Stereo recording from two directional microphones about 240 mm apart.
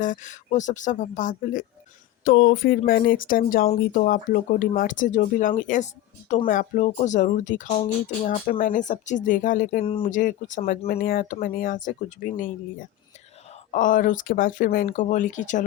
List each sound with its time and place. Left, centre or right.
0.0 s speech: left
13.7 s speech: left